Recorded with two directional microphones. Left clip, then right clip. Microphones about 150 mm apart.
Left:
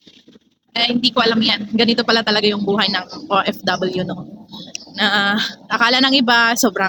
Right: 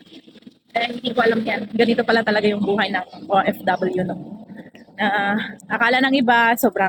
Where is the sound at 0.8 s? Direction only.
25° left (ahead or behind).